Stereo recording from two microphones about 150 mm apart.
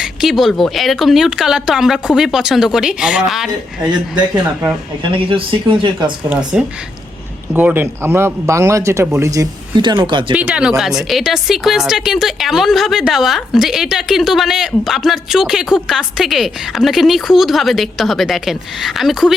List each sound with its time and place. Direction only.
0.0 s speech: centre (ahead or behind)
5.1 s speech: 35° right (ahead or behind)
6.3 s speech: 5° right (ahead or behind); by 10.3 s 30° right (ahead or behind)
10.3 s speech: 5° right (ahead or behind)